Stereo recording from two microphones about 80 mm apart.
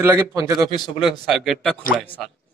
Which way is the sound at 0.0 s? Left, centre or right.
Right.